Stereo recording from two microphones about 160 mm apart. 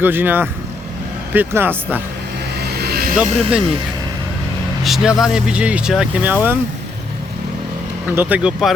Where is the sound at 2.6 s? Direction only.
80° right.